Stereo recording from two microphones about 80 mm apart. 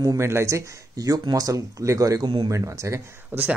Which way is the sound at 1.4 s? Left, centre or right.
Right.